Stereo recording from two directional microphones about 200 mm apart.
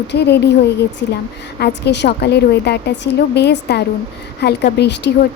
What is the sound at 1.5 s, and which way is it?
A woman's voice, 55° left (ahead or behind).